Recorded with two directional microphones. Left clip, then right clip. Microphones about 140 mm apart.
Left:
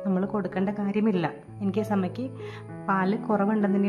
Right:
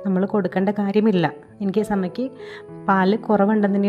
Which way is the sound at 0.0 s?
30° right (ahead or behind).